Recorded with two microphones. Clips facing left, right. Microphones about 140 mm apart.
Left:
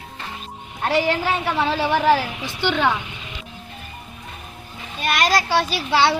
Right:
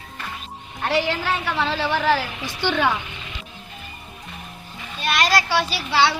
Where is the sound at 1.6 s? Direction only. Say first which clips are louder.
Left 4 dB; 15° left (ahead or behind).